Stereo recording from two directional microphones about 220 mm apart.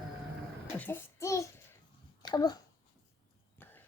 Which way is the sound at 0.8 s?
10° left (ahead or behind).